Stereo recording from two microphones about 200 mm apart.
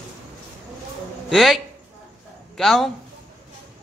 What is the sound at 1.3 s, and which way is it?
A man's voice, centre (ahead or behind).